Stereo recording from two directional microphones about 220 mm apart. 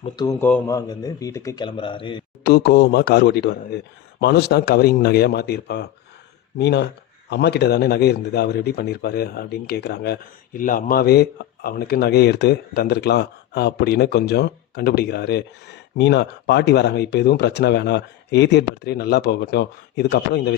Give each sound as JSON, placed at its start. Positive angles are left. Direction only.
{"t": 0.0, "sound": "speech", "side_deg": 15}
{"t": 2.4, "sound": "speech", "side_deg": 45}